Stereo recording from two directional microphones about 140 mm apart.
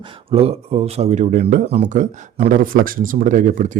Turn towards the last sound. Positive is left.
turn(degrees=-65)  # may be behind; listen again after turning